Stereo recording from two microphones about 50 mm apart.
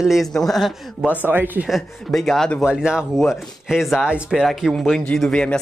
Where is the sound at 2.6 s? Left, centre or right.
Centre.